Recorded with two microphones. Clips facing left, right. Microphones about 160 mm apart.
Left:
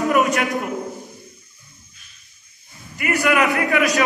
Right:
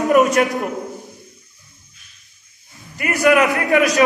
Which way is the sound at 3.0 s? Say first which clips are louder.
Right 4 dB; 40° right (ahead or behind).